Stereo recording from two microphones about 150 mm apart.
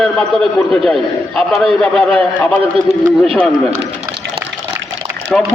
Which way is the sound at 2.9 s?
45° right (ahead or behind).